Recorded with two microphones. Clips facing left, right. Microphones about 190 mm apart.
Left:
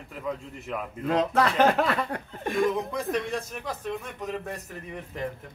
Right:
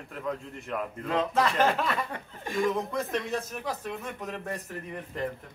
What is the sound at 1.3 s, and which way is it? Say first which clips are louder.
Speech: left 3 dB; 65° left (ahead or behind).